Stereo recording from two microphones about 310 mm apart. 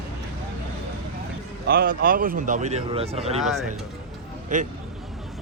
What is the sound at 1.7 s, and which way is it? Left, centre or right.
Speech, right.